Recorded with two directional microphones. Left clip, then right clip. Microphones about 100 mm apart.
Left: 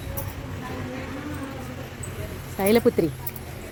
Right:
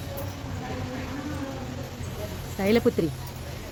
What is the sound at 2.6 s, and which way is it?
Speech, 15° left (ahead or behind).